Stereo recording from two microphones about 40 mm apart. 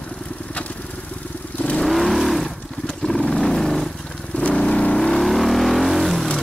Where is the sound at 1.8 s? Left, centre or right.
Centre.